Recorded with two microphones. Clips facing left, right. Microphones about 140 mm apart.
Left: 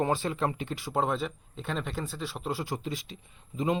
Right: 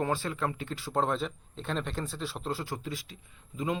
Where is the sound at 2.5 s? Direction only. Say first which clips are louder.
Left 2 dB; 15° left (ahead or behind).